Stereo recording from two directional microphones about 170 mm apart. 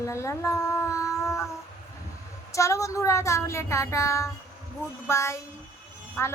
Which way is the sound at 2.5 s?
20° left (ahead or behind).